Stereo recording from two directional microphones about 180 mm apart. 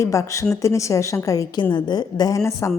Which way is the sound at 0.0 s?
15° left (ahead or behind).